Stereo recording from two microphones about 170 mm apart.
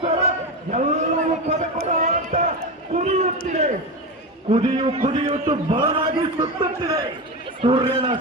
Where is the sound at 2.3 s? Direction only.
40° right (ahead or behind).